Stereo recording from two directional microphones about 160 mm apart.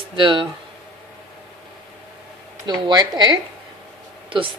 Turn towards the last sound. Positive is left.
turn(degrees=-35)  # may be behind; listen again after turning